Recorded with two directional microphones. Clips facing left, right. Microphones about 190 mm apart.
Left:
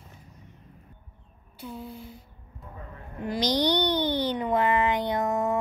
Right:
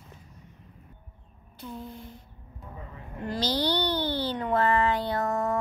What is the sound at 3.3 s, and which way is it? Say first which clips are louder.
Speech: left 3 dB; 15° left (ahead or behind).